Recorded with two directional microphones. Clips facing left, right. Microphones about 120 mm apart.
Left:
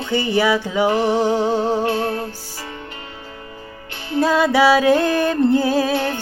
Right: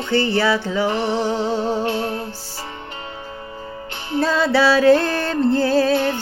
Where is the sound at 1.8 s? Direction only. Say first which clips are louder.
Left 2 dB; 25° right (ahead or behind).